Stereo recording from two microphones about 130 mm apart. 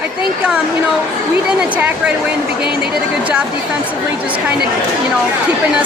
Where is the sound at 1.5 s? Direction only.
10° right (ahead or behind).